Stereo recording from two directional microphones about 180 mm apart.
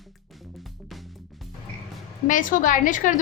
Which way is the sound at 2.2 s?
45° left (ahead or behind).